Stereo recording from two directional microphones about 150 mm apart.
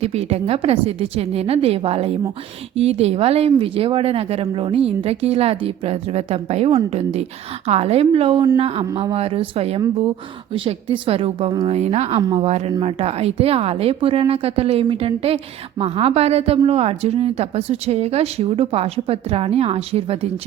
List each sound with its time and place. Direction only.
0.0 s a woman's voice: 45° right (ahead or behind)